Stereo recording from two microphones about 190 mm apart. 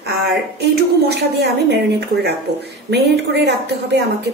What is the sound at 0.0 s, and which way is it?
A woman's voice, 60° right (ahead or behind).